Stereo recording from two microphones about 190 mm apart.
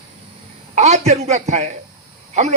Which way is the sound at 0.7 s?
35° right (ahead or behind).